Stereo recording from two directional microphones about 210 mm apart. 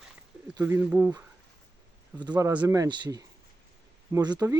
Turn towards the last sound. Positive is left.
turn(degrees=-15)  # may be behind; listen again after turning